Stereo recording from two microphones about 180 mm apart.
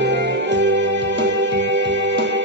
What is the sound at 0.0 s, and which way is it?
Music, 75° right (ahead or behind).